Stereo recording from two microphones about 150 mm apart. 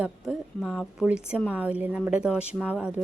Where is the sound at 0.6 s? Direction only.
10° left (ahead or behind).